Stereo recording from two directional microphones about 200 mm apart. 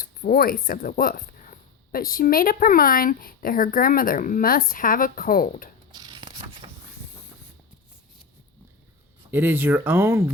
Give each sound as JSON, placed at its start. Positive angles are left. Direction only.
{"t": 0.0, "sound": "speech", "side_deg": 45}
{"t": 5.9, "sound": "a sound", "side_deg": -20}
{"t": 9.3, "sound": "speech", "side_deg": -10}